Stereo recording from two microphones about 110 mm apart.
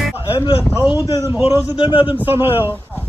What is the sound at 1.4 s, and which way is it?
Speech, 55° left (ahead or behind).